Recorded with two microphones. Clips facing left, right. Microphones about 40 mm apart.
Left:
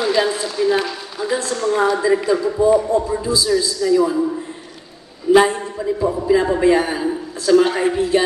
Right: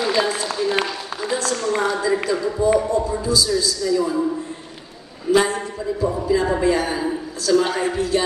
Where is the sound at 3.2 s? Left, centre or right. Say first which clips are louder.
Left 2 dB; left.